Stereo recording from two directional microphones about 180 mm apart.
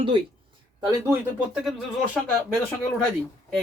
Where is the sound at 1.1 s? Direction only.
5° right (ahead or behind).